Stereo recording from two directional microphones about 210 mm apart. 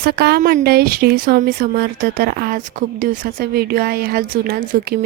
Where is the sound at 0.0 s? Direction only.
50° right (ahead or behind).